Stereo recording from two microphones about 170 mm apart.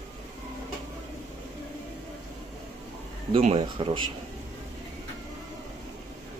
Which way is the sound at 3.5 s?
30° right (ahead or behind).